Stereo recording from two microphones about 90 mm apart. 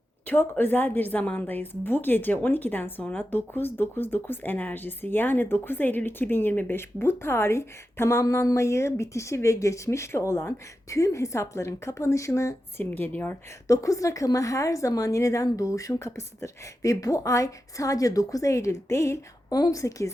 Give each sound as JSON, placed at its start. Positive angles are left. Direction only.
{"t": 0.3, "sound": "a woman's voice", "side_deg": 20}
{"t": 12.8, "sound": "a woman's voice", "side_deg": 20}
{"t": 13.7, "sound": "a woman's voice", "side_deg": 35}
{"t": 19.5, "sound": "a woman's voice", "side_deg": 45}